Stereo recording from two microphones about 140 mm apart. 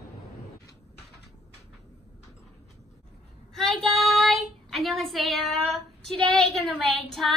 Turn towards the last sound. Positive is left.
turn(degrees=0)  # may be behind; listen again after turning